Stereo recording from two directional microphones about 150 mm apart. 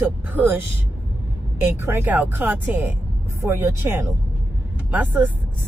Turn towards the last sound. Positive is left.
turn(degrees=-10)  # may be behind; listen again after turning